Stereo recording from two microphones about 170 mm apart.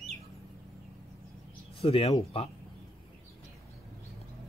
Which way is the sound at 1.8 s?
35° left (ahead or behind).